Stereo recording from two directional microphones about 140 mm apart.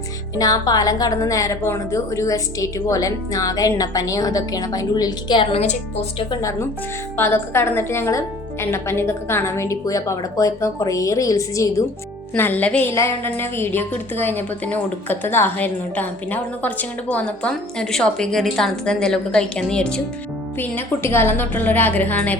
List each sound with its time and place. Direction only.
0.3 s a woman's voice: 25° left (ahead or behind)
5.5 s a woman's voice: 50° left (ahead or behind)
6.4 s a woman's voice: 20° left (ahead or behind)
12.3 s a woman's voice: 10° left (ahead or behind)